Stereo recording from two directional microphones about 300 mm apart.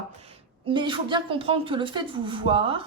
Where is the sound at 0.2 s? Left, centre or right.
Centre.